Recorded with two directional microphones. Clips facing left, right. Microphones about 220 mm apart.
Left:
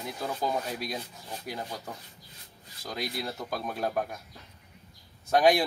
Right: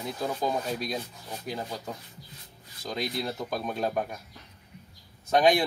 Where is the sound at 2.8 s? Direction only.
15° right (ahead or behind).